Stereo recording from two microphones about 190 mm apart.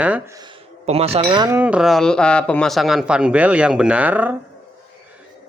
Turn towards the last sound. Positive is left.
turn(degrees=-10)  # may be behind; listen again after turning